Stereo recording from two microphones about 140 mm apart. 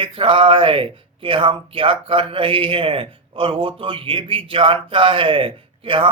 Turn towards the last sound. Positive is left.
turn(degrees=-40)  # may be behind; listen again after turning